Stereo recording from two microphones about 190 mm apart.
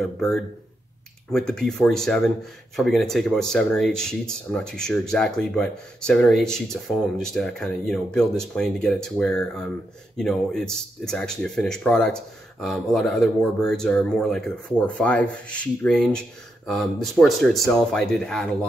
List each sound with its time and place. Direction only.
0.0 s speech: centre (ahead or behind)